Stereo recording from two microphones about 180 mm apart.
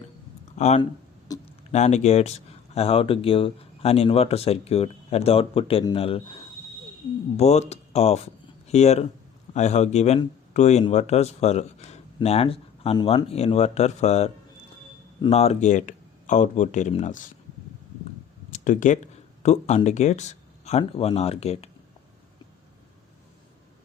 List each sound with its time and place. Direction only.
0.5 s speech: 40° left (ahead or behind)
1.3 s a sound: 20° left (ahead or behind)
1.7 s speech: 40° left (ahead or behind)
7.3 s speech: 40° left (ahead or behind)
18.5 s a sound: 45° left (ahead or behind)
19.4 s speech: 40° left (ahead or behind)